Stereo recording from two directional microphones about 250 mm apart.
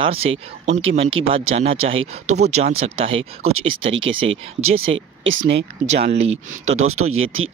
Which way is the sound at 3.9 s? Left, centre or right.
Right.